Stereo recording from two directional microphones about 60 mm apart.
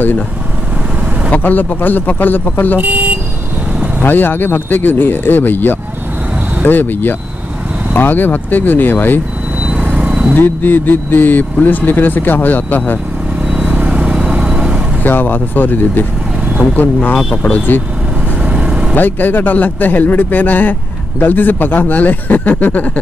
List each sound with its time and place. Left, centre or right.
1.3 s speech: left
2.8 s speech: right
4.0 s speech: left
9.6 s vehicle: centre
10.3 s speech: left
13.5 s vehicle: centre
15.0 s speech: left
18.4 s vehicle: centre
18.9 s speech: left